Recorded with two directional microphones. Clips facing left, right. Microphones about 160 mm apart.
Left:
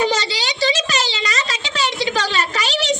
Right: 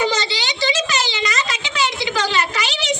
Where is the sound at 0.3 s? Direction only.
35° left (ahead or behind).